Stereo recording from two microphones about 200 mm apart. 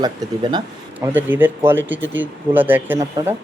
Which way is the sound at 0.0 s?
20° right (ahead or behind).